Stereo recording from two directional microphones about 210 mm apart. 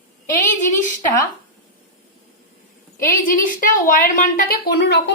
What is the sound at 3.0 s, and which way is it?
A woman's voice, 40° left (ahead or behind).